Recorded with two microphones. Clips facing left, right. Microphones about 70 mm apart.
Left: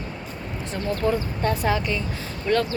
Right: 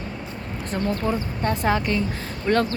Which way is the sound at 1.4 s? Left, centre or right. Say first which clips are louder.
Right 2 dB; right.